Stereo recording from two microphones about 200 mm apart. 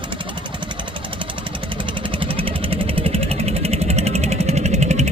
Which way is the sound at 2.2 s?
25° right (ahead or behind).